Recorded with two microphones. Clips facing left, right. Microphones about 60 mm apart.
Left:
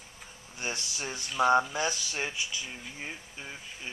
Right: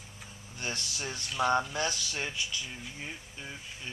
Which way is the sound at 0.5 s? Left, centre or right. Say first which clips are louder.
Left 1 dB; centre.